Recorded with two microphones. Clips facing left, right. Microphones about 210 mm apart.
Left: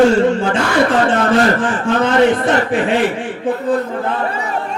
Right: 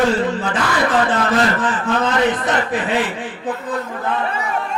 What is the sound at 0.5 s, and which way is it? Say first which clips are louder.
Speech: left 4 dB; 30° left (ahead or behind).